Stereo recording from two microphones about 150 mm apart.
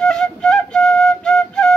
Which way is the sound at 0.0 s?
5° left (ahead or behind).